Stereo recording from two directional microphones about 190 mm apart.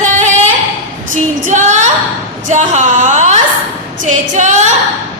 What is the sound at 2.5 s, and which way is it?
Speech, 40° right (ahead or behind).